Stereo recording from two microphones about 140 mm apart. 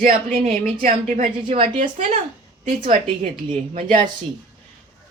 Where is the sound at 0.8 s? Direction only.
65° right (ahead or behind).